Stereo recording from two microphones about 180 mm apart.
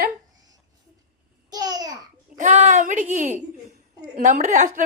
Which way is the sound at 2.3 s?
40° right (ahead or behind).